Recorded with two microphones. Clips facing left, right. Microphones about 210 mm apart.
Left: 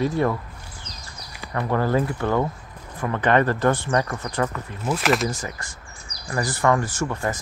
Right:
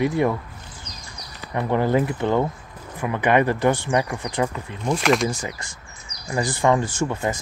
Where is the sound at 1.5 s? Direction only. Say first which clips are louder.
Right 2 dB; 20° right (ahead or behind).